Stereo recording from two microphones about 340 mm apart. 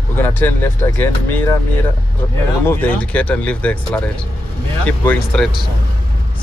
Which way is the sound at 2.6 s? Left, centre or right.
Centre.